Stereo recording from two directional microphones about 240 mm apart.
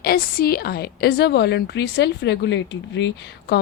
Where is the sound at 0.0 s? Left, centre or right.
Left.